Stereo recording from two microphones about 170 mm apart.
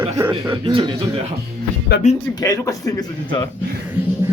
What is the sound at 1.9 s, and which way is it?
Speech, 70° left (ahead or behind).